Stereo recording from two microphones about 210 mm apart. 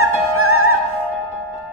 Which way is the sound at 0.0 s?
90° right.